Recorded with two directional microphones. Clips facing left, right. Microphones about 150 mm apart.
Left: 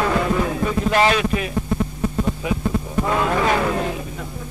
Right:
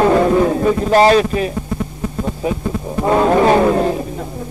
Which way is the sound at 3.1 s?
35° right (ahead or behind).